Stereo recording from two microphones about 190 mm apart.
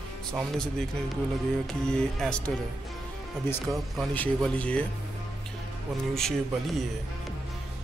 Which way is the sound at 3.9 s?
5° left (ahead or behind).